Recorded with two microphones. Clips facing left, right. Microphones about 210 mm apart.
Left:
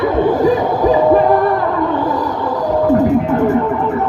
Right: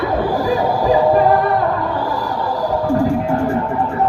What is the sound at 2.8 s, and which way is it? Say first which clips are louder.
Music: left 5 dB; 20° left (ahead or behind).